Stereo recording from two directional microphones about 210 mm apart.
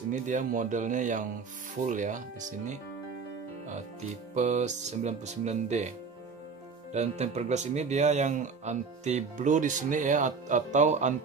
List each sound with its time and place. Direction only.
0.1 s speech: 35° right (ahead or behind)
4.4 s speech: 35° right (ahead or behind)